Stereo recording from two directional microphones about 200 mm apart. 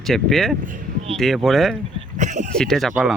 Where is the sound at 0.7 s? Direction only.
40° right (ahead or behind).